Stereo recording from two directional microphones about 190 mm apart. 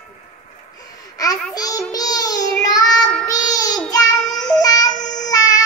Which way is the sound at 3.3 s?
20° left (ahead or behind).